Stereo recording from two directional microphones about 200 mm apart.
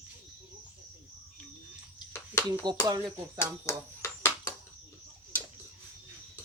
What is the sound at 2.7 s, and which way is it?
Speech, 20° right (ahead or behind).